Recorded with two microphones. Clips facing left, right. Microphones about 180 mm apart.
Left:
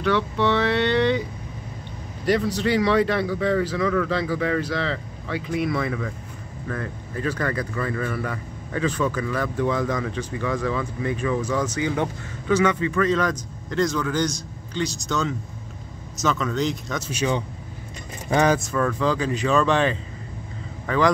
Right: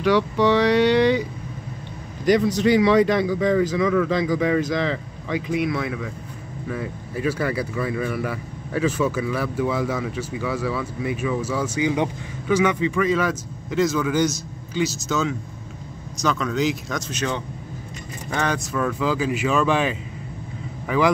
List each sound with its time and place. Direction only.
0.0 s speech: 10° right (ahead or behind)
2.2 s speech: 15° right (ahead or behind)
5.6 s speech: centre (ahead or behind)
17.1 s a man's voice: 10° left (ahead or behind)
18.6 s speech: 5° right (ahead or behind)